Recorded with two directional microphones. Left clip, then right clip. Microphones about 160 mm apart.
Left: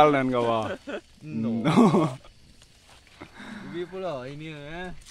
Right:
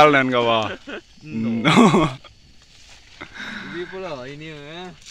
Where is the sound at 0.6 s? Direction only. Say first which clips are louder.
Right 3 dB; 80° left; by 1.5 s 65° left (ahead or behind).